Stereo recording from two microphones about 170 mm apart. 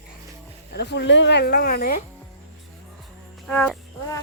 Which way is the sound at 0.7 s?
85° left.